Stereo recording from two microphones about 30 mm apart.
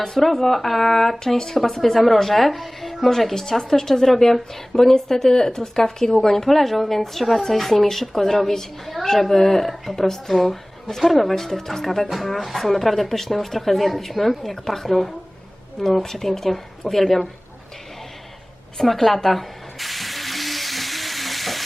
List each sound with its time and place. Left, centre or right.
0.2 s speech: centre
12.0 s speech: centre
18.8 s spray: centre